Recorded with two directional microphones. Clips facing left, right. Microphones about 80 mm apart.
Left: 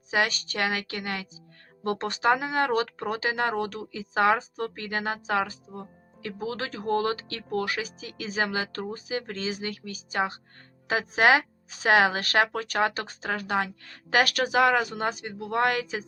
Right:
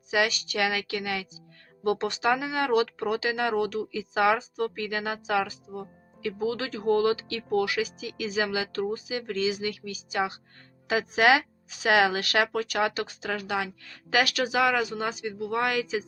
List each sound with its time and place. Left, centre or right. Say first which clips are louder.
0.1 s speech: right 1 dB; left